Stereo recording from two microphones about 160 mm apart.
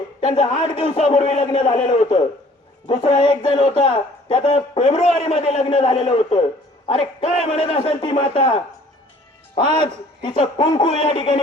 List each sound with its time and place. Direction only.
0.3 s speech: 30° left (ahead or behind)
9.8 s speech: 30° left (ahead or behind)